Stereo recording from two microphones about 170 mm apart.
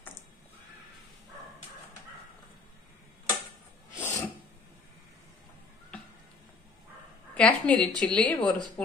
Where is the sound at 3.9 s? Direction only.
15° left (ahead or behind).